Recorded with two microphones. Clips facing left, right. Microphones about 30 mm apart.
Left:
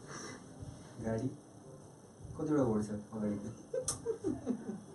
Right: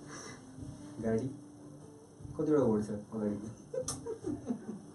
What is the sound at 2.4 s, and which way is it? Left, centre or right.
Speech, centre.